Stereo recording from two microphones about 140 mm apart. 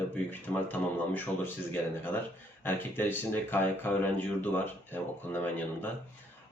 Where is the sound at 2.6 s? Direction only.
15° left (ahead or behind).